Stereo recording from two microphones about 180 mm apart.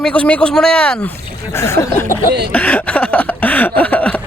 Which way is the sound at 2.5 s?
10° left (ahead or behind).